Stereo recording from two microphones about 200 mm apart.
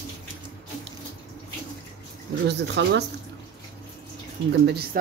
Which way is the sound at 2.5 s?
60° right (ahead or behind).